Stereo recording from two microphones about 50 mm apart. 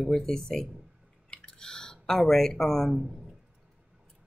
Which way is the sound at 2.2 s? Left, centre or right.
Centre.